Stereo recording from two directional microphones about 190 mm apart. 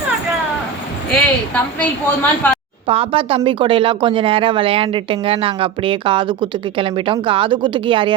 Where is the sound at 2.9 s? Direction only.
30° right (ahead or behind).